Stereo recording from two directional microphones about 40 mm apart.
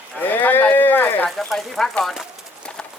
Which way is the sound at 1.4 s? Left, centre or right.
Centre.